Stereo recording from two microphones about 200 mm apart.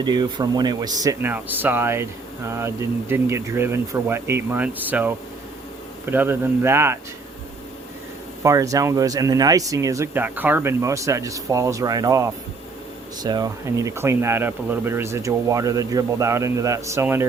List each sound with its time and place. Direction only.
0.0 s speech: 20° right (ahead or behind)
8.4 s speech: 15° right (ahead or behind)